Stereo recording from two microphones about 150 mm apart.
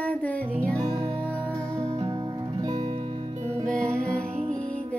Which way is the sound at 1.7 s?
20° right (ahead or behind).